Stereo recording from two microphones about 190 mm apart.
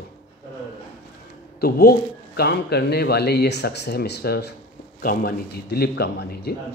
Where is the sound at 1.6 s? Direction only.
55° left (ahead or behind).